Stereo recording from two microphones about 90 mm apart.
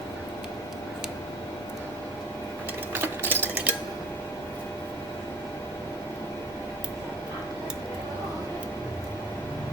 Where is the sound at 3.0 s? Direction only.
25° right (ahead or behind).